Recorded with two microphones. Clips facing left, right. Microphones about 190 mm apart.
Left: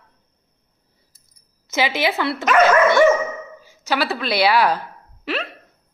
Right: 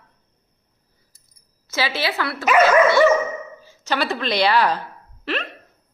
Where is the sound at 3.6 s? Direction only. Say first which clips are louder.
Left 2 dB; 10° left (ahead or behind).